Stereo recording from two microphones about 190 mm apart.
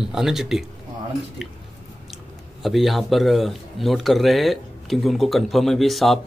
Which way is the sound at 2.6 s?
Centre (ahead or behind).